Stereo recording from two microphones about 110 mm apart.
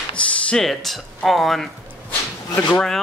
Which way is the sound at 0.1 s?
5° left (ahead or behind).